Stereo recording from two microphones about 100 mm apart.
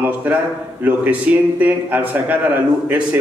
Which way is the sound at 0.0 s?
15° right (ahead or behind).